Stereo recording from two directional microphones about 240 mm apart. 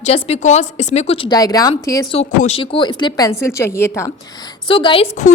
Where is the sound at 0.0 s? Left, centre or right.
Left.